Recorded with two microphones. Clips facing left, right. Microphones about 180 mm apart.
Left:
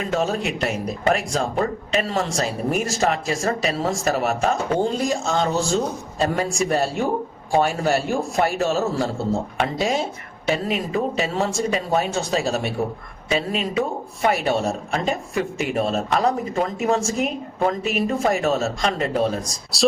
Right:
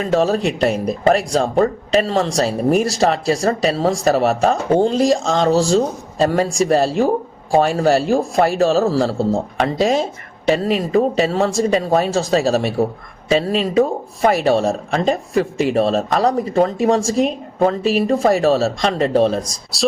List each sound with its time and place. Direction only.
0.0 s speech: 35° right (ahead or behind)